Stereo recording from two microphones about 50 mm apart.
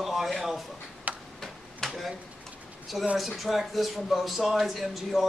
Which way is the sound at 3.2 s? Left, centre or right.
Centre.